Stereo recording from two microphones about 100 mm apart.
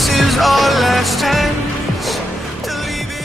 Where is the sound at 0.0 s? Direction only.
Centre (ahead or behind).